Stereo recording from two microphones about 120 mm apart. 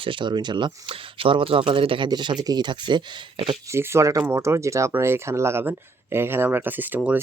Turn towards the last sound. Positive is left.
turn(degrees=-15)  # may be behind; listen again after turning